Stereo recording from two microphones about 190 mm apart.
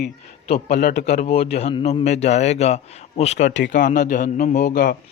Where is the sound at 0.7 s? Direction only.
60° left (ahead or behind).